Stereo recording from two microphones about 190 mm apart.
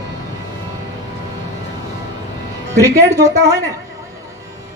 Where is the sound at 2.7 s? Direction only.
15° right (ahead or behind).